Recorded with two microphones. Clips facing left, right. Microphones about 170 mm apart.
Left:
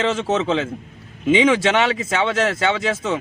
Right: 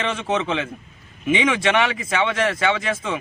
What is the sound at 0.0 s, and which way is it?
A man's voice, 25° left (ahead or behind).